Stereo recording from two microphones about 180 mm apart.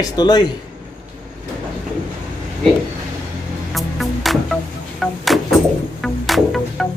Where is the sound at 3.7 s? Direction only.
Centre (ahead or behind).